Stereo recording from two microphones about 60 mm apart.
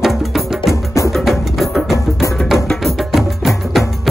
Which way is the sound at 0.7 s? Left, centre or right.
Left.